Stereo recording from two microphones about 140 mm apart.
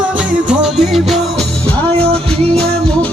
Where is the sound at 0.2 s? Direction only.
5° right (ahead or behind).